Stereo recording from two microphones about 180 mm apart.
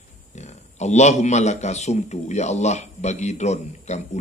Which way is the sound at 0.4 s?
40° left (ahead or behind).